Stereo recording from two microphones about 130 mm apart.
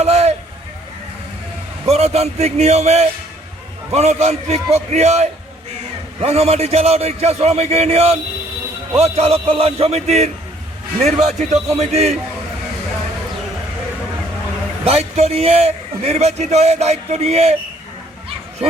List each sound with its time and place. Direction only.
0.0 s a sound: 55° right (ahead or behind)
1.9 s a man's voice: 55° right (ahead or behind)
14.8 s a man's voice: 55° right (ahead or behind)